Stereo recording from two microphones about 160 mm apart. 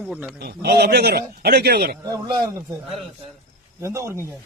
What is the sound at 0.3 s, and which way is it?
A man's voice, 80° right.